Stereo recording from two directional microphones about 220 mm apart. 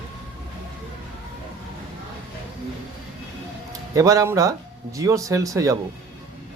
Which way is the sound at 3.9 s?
15° right (ahead or behind).